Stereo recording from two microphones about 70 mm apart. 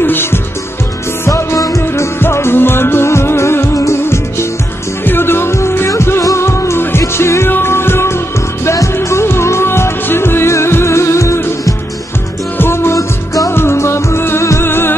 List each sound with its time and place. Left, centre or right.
0.0 s music: left